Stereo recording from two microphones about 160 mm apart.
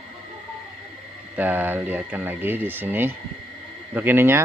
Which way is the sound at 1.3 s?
10° right (ahead or behind).